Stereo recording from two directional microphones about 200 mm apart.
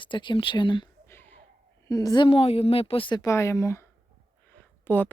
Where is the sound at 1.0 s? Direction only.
10° left (ahead or behind).